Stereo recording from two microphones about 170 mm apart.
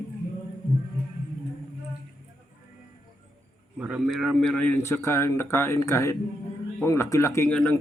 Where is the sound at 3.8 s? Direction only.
5° right (ahead or behind).